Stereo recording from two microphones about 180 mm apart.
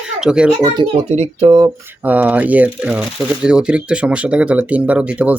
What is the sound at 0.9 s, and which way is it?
Speech, 35° right (ahead or behind).